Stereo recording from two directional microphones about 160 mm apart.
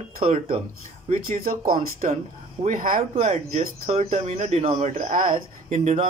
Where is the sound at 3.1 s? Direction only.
45° right (ahead or behind).